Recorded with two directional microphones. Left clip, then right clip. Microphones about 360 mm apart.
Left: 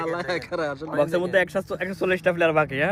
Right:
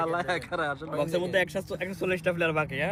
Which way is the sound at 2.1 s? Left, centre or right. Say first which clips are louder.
Left 6 dB; left.